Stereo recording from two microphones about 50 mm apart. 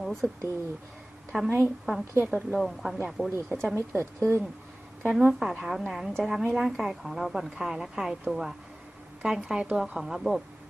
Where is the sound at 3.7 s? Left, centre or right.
Right.